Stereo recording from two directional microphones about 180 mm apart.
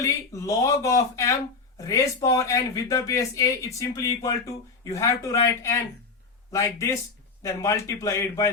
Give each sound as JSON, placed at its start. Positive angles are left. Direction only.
{"t": 0.0, "sound": "speech", "side_deg": 15}